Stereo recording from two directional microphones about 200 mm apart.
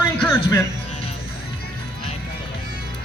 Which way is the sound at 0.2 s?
15° left (ahead or behind).